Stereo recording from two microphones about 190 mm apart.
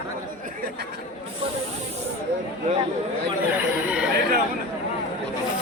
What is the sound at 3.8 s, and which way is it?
Chatter, 5° right (ahead or behind).